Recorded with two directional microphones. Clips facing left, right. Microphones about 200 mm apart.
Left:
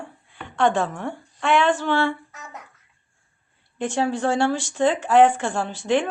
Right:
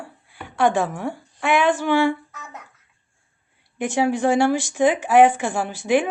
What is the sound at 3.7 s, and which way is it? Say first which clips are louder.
Speech: right 3 dB; 10° right (ahead or behind).